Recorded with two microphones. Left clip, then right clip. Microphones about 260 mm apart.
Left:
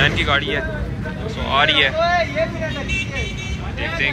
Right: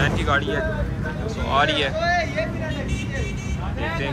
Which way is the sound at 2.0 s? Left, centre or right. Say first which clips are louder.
Left 4 dB; centre.